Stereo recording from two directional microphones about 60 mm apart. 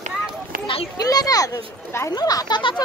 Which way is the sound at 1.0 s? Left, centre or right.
Left.